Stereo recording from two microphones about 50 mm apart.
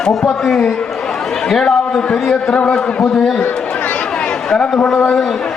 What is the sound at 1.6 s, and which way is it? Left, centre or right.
Speech, centre.